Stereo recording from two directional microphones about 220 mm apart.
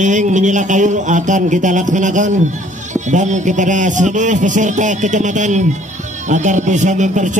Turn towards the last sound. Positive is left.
turn(degrees=-35)  # may be behind; listen again after turning